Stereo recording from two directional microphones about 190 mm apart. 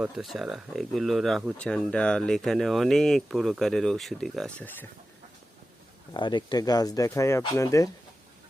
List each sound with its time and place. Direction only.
0.0 s speech: centre (ahead or behind)
6.1 s speech: 25° left (ahead or behind)